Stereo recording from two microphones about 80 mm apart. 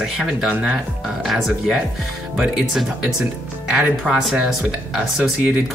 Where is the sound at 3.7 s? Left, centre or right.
Centre.